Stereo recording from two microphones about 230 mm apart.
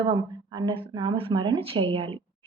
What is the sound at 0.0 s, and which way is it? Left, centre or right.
Speech, centre.